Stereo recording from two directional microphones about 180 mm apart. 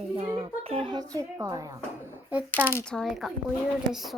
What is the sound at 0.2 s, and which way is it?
A child's voice, 30° right (ahead or behind).